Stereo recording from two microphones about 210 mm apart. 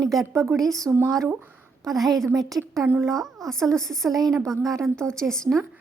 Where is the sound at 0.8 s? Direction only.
15° right (ahead or behind).